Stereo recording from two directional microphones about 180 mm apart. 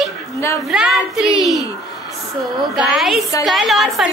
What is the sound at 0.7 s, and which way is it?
Speech, centre (ahead or behind).